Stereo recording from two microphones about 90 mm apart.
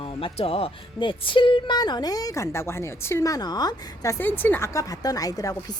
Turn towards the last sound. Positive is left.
turn(degrees=40)  # may be behind; listen again after turning